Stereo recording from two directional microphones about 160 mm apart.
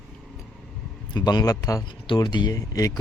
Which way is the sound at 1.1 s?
25° left (ahead or behind).